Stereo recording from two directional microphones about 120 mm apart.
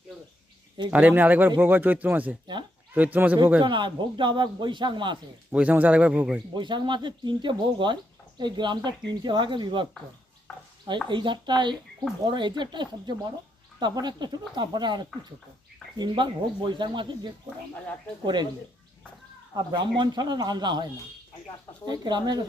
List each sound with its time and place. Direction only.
0.9 s speech: 15° right (ahead or behind)
3.6 s speech: 40° right (ahead or behind)
5.5 s speech: 10° right (ahead or behind)
6.5 s speech: 40° right (ahead or behind)
10.5 s stir: centre (ahead or behind)
11.1 s speech: 40° right (ahead or behind)
19.5 s speech: 40° right (ahead or behind)
21.8 s speech: 40° right (ahead or behind)